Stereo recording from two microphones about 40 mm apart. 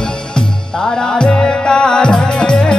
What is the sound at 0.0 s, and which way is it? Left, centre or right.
Music, centre.